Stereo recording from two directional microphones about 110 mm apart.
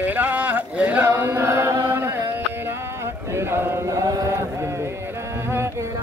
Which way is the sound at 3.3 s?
20° right (ahead or behind).